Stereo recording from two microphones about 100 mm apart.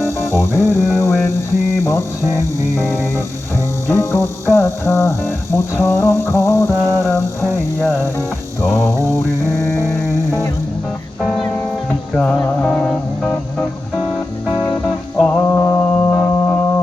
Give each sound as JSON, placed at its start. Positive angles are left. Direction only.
{"t": 0.0, "sound": "music", "side_deg": 25}
{"t": 2.2, "sound": "music", "side_deg": -35}
{"t": 3.8, "sound": "music", "side_deg": 25}
{"t": 8.6, "sound": "mantra", "side_deg": 25}
{"t": 9.6, "sound": "music", "side_deg": 25}
{"t": 12.6, "sound": "music", "side_deg": 10}
{"t": 14.5, "sound": "music", "side_deg": 35}
{"t": 15.2, "sound": "music", "side_deg": 15}
{"t": 16.1, "sound": "music", "side_deg": 15}